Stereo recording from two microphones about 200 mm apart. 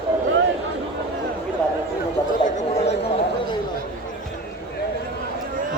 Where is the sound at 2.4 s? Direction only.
35° left (ahead or behind).